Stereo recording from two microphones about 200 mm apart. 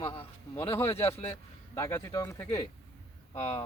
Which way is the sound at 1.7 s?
15° left (ahead or behind).